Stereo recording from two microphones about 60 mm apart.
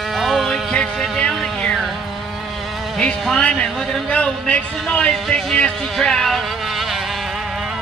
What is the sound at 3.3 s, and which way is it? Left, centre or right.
A man's voice, centre.